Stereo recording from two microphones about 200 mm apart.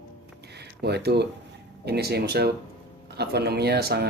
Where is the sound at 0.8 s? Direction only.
55° right (ahead or behind).